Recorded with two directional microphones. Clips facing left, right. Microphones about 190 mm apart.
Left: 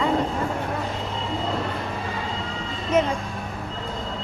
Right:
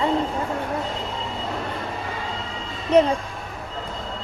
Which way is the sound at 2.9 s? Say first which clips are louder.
Right 5 dB; 35° right (ahead or behind).